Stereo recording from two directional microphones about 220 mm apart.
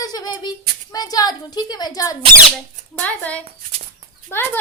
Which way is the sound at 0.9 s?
15° left (ahead or behind).